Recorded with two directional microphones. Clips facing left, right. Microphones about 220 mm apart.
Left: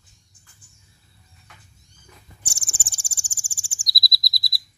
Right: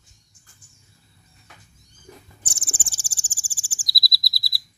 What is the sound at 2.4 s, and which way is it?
Owl, 10° left (ahead or behind).